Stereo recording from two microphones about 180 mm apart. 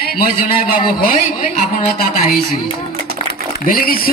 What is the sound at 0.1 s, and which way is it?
A man's voice, 55° left (ahead or behind).